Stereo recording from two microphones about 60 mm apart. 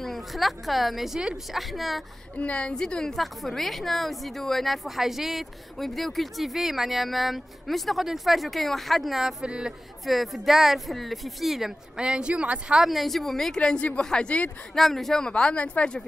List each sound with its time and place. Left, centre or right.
0.0 s a woman's voice: centre
2.3 s a woman's voice: left
2.7 s a woman's voice: centre
10.0 s a woman's voice: centre
12.0 s speech: centre
12.8 s a woman's voice: centre
13.6 s speech: centre
14.8 s speech: centre